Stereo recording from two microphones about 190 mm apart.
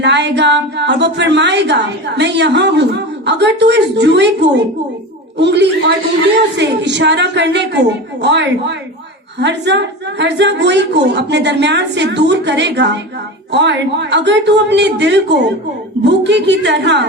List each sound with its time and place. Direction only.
0.0 s a woman's voice: 65° right (ahead or behind)